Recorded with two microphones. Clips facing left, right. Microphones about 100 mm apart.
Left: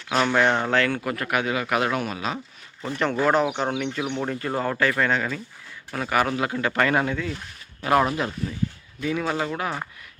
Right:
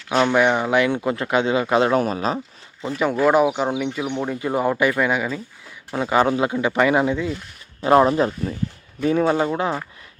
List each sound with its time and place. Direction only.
0.2 s speech: 15° right (ahead or behind); by 2.4 s 35° right (ahead or behind)
2.9 s speech: 5° right (ahead or behind)
5.9 s speech: 20° right (ahead or behind)
7.8 s speech: 30° right (ahead or behind)
9.0 s speech: 40° right (ahead or behind)